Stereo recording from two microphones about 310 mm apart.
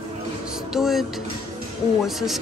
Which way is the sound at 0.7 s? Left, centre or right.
Centre.